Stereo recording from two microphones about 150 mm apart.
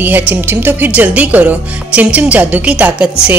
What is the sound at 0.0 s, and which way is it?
Speech, 10° right (ahead or behind).